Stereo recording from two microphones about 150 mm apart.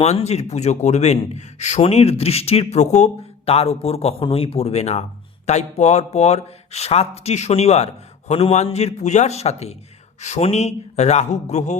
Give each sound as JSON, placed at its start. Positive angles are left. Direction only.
{"t": 0.0, "sound": "speech", "side_deg": 45}